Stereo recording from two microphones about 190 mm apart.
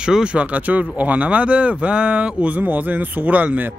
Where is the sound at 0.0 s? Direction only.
5° right (ahead or behind).